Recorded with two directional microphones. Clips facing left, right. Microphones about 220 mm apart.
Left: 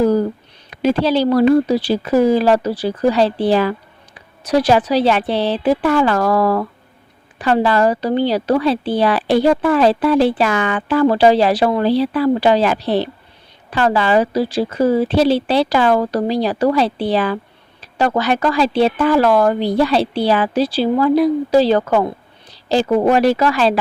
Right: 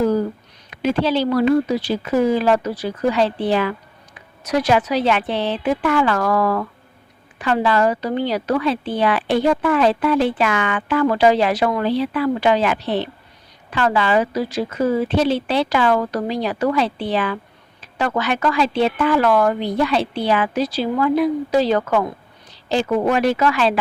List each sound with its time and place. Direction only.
0.7 s speech: 35° left (ahead or behind)